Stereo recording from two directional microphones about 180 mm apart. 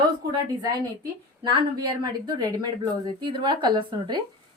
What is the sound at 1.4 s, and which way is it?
A woman's voice, 25° right (ahead or behind).